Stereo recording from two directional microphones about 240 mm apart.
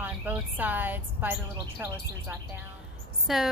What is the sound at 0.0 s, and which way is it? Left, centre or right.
A woman's voice, centre.